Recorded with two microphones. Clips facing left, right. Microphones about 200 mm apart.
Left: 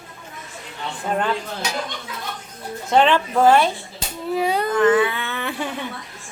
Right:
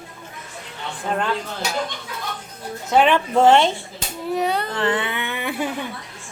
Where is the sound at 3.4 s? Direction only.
25° right (ahead or behind).